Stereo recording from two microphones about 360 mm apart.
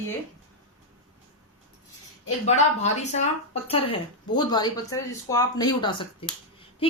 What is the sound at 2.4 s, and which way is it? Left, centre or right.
Speech, centre.